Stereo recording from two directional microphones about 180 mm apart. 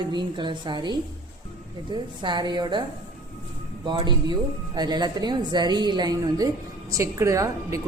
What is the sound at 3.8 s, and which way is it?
A woman's voice, 25° right (ahead or behind).